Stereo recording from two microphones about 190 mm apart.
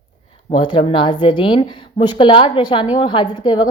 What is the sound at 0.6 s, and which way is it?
A woman's voice, 25° left (ahead or behind).